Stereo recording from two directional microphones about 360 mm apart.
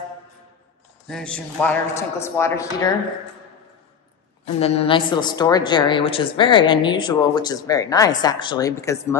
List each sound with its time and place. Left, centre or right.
1.0 s a woman's voice: centre
4.6 s a woman's voice: centre